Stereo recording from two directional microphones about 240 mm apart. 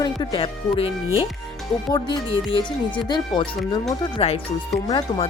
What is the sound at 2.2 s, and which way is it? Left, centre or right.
Speech, left.